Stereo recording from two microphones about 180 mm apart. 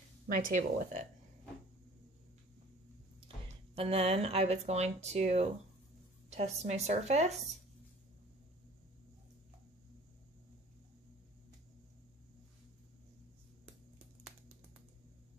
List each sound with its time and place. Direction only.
0.3 s speech: 50° right (ahead or behind)
3.7 s speech: 30° right (ahead or behind)